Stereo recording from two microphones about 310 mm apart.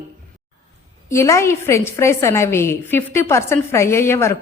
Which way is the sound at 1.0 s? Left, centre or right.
Centre.